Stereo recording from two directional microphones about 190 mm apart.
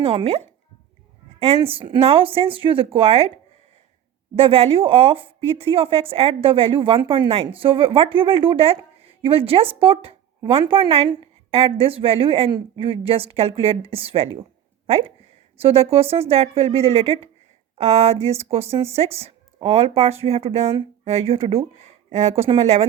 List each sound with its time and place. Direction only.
0.0 s speech: 30° right (ahead or behind)
4.4 s speech: 30° right (ahead or behind)